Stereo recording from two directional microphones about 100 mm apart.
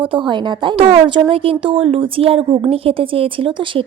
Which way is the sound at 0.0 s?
60° right (ahead or behind).